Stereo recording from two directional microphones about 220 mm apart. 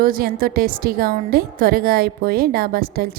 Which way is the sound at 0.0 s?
40° right (ahead or behind).